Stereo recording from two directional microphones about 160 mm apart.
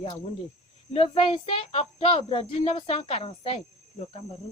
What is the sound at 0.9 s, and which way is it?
Speech, 35° left (ahead or behind).